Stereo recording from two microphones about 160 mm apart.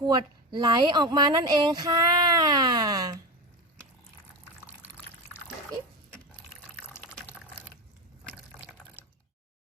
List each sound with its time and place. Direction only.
0.0 s speech: 25° right (ahead or behind)
6.8 s water: 15° left (ahead or behind)